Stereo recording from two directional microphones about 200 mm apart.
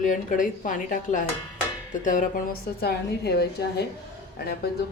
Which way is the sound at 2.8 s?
55° left (ahead or behind).